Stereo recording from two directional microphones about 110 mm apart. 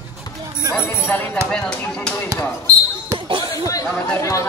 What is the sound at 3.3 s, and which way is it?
Chatter, 45° right (ahead or behind).